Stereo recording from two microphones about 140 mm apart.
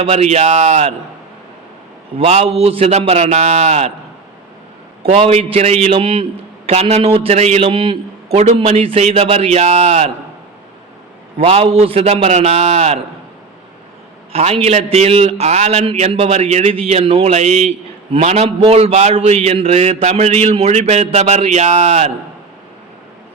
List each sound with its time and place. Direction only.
0.0 s a man's voice: 50° right (ahead or behind)
2.1 s a man's voice: 50° right (ahead or behind)
5.3 s a man's voice: 50° right (ahead or behind)
6.7 s a man's voice: 50° right (ahead or behind)
8.4 s a man's voice: 55° right (ahead or behind)
11.3 s a man's voice: 40° right (ahead or behind)
14.3 s a man's voice: 45° right (ahead or behind)